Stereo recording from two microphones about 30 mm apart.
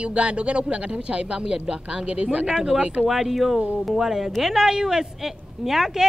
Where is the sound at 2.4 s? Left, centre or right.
Right.